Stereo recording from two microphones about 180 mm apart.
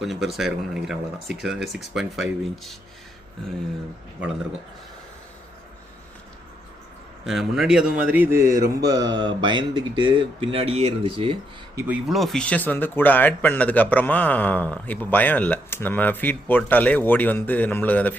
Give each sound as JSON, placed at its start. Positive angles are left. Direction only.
{"t": 0.0, "sound": "speech", "side_deg": 0}
{"t": 7.3, "sound": "speech", "side_deg": 0}
{"t": 8.6, "sound": "mantra", "side_deg": -65}
{"t": 9.0, "sound": "speech", "side_deg": -25}
{"t": 12.0, "sound": "speech", "side_deg": 0}